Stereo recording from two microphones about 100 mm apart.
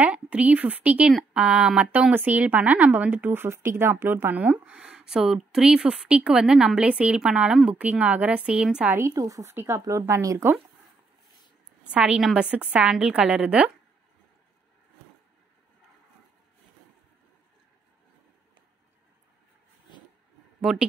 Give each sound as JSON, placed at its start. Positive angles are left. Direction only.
{"t": 0.0, "sound": "speech", "side_deg": -15}
{"t": 8.9, "sound": "speech", "side_deg": -30}
{"t": 11.9, "sound": "speech", "side_deg": -10}
{"t": 20.7, "sound": "speech", "side_deg": -5}